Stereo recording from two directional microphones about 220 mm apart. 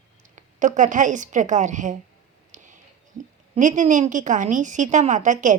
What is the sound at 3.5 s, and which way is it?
Speech, 35° right (ahead or behind).